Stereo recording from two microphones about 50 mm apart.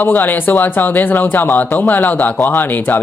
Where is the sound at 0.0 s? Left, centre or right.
Left.